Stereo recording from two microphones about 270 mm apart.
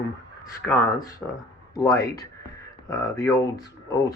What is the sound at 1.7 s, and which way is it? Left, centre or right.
Speech, centre.